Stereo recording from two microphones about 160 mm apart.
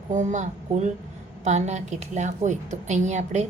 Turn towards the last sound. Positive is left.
turn(degrees=-50)  # may be behind; listen again after turning